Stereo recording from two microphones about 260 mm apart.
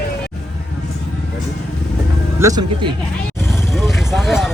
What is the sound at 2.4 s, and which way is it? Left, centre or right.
Speech, centre.